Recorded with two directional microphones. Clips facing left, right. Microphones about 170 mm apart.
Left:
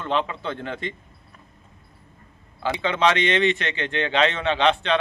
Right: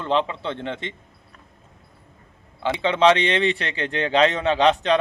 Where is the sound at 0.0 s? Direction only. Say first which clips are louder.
Right 2 dB; 30° right (ahead or behind).